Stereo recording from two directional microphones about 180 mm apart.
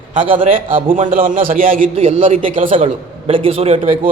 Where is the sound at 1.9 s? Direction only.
35° right (ahead or behind).